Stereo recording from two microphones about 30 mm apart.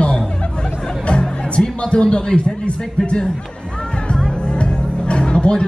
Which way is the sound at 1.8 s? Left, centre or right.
Left.